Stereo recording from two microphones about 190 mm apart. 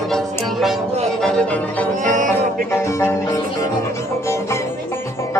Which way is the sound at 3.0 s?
15° left (ahead or behind).